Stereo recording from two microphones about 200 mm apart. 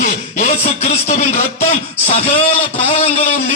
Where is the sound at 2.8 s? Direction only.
30° left (ahead or behind).